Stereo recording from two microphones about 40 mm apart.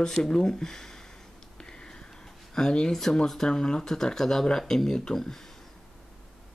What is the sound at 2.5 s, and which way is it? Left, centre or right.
Speech, centre.